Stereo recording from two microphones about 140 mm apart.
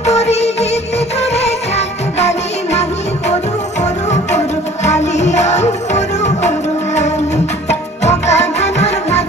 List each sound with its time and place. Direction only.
0.0 s music: 50° left (ahead or behind)
3.8 s music: 55° left (ahead or behind)
8.0 s music: 50° left (ahead or behind)